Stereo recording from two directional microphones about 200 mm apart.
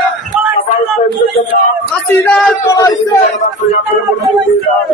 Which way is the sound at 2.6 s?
15° left (ahead or behind).